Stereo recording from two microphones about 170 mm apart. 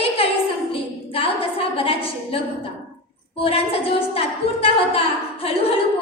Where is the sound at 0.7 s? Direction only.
35° left (ahead or behind).